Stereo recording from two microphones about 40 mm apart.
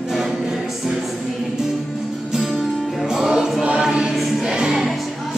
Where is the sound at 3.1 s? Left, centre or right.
Centre.